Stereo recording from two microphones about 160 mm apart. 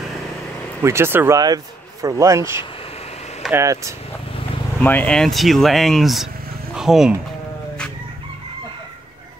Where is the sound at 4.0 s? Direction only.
35° left (ahead or behind).